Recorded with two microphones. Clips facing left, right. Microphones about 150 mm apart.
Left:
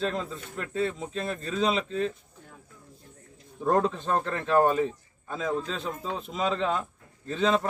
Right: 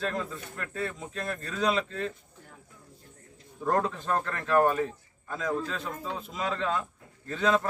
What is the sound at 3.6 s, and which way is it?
A man's voice, 20° left (ahead or behind).